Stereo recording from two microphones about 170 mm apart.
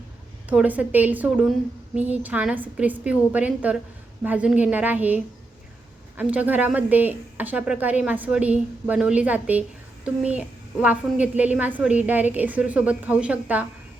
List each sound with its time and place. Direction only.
0.5 s speech: 10° right (ahead or behind)